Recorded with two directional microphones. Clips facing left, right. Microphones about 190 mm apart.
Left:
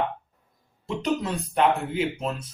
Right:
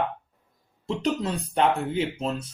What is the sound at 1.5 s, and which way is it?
Speech, 30° right (ahead or behind).